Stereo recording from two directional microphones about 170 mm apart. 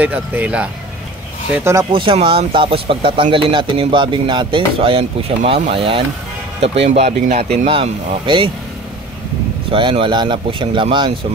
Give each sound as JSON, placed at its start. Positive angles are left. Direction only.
{"t": 0.0, "sound": "speech", "side_deg": -10}
{"t": 1.9, "sound": "speech", "side_deg": -30}
{"t": 9.7, "sound": "speech", "side_deg": -30}